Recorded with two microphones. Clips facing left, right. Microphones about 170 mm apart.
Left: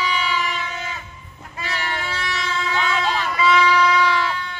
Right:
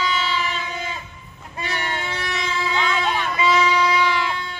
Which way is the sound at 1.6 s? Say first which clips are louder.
Even; 20° right (ahead or behind).